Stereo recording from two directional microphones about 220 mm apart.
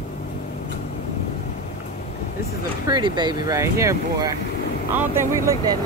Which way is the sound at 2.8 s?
20° right (ahead or behind).